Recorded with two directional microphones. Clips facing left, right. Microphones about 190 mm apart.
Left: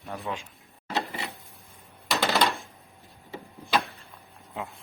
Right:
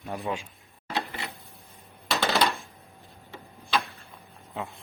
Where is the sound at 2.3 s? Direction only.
Centre (ahead or behind).